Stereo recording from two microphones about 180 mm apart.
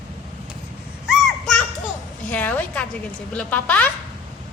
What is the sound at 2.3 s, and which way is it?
A woman's voice, 10° left (ahead or behind).